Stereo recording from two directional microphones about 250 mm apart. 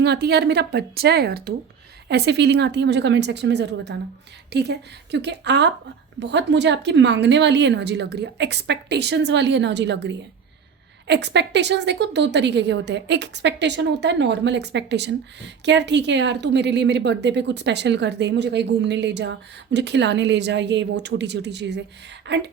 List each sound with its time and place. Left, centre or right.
0.0 s a woman's voice: right